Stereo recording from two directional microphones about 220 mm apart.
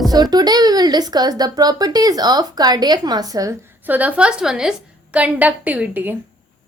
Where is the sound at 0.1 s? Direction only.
20° right (ahead or behind).